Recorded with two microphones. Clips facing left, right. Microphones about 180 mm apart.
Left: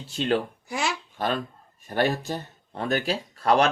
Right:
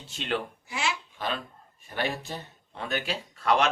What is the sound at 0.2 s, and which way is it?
Speech, 40° left (ahead or behind).